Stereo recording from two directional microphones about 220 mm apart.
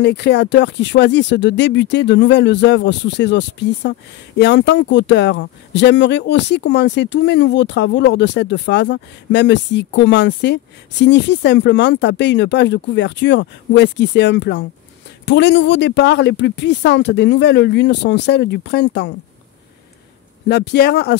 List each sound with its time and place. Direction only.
0.0 s speech: 50° left (ahead or behind)
20.4 s speech: 50° left (ahead or behind)